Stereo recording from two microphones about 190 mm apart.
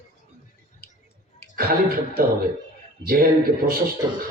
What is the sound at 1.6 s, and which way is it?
A man's voice, 50° right (ahead or behind).